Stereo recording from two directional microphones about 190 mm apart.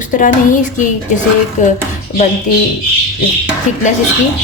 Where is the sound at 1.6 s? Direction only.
40° left (ahead or behind).